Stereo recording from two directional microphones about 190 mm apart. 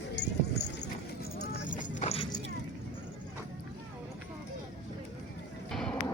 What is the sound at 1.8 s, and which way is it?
Vehicle, 35° left (ahead or behind).